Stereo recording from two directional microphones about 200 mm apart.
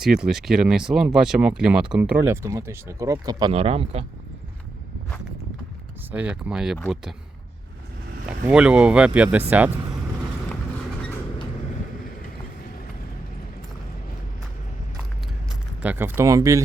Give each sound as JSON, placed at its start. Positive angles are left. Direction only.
{"t": 0.0, "sound": "speech", "side_deg": -5}
{"t": 3.5, "sound": "speech", "side_deg": -30}
{"t": 6.1, "sound": "speech", "side_deg": -5}
{"t": 8.3, "sound": "speech", "side_deg": -5}
{"t": 15.8, "sound": "speech", "side_deg": -10}